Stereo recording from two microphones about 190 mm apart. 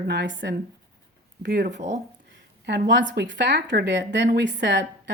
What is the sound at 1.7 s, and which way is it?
Speech, 40° right (ahead or behind).